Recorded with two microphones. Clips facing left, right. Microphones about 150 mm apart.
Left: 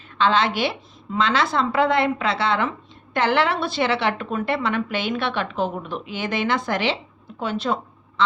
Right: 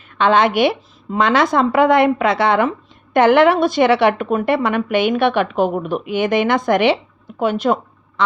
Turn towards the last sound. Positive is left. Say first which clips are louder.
# right 7 dB
turn(degrees=-40)  # may be behind; listen again after turning